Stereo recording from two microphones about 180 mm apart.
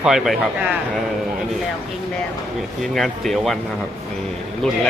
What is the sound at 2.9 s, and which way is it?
Speech, centre (ahead or behind).